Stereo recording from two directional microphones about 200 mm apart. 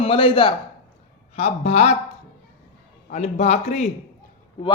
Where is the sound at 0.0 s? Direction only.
25° left (ahead or behind).